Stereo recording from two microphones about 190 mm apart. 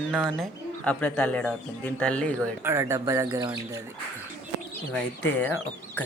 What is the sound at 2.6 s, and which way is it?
Speech, 15° right (ahead or behind).